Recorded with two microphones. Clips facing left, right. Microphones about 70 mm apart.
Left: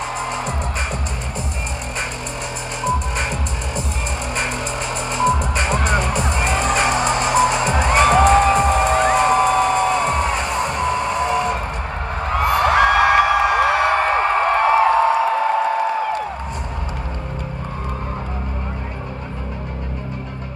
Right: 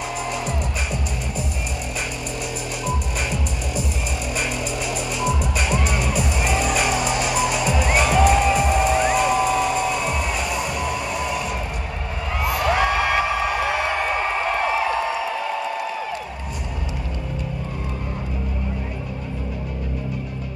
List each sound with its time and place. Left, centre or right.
2.8 s music: left
5.1 s music: left
12.3 s a sound: left